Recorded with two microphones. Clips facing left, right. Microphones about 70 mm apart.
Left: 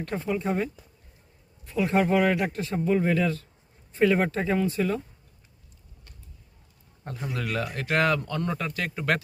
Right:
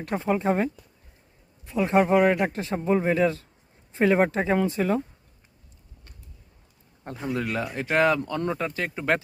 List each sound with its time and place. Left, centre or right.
0.0 s speech: right
1.7 s speech: right
7.0 s a man's voice: right